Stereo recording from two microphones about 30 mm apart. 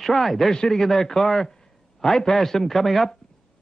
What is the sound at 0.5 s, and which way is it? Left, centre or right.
Speech, left.